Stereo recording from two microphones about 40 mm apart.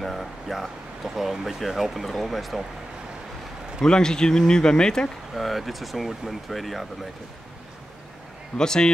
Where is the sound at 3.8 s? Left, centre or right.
Centre.